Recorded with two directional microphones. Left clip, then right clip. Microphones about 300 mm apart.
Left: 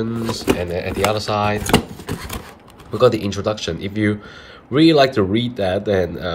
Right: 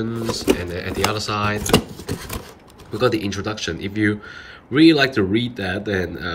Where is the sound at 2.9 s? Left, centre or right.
Centre.